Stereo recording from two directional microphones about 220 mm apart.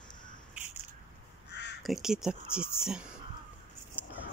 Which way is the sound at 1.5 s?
50° left (ahead or behind).